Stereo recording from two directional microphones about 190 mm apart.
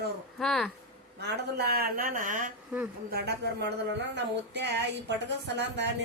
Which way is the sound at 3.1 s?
60° right (ahead or behind).